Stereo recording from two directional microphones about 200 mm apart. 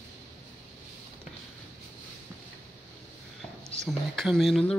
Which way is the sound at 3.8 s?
Centre (ahead or behind).